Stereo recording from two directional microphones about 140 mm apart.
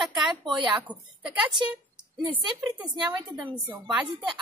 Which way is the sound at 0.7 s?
10° right (ahead or behind).